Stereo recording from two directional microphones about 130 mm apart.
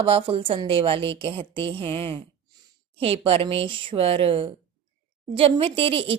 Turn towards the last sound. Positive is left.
turn(degrees=-45)  # may be behind; listen again after turning